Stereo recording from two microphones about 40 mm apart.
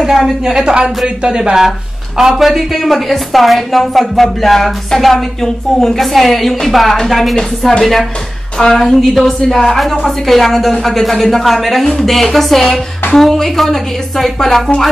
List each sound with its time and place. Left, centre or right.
0.4 s a woman's voice: centre